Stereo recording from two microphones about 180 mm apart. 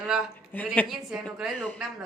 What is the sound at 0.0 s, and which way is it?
A man's voice, 5° right (ahead or behind).